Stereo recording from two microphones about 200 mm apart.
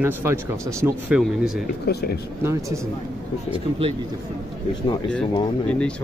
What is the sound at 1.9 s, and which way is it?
Speech, 55° left (ahead or behind).